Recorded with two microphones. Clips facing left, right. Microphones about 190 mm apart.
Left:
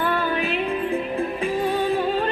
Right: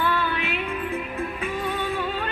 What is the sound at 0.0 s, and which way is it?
Music, 45° left (ahead or behind).